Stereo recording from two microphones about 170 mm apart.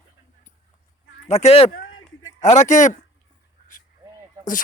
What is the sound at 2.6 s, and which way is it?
Speech, 45° left (ahead or behind).